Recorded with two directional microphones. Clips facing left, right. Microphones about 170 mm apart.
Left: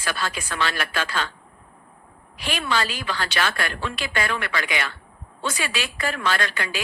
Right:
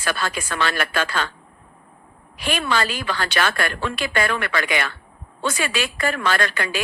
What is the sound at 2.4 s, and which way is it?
A woman's voice, 55° right (ahead or behind).